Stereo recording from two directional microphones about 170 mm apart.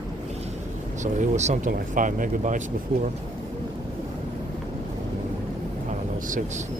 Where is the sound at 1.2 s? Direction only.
45° right (ahead or behind).